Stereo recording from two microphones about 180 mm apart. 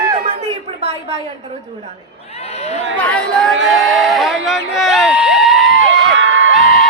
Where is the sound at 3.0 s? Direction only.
5° left (ahead or behind).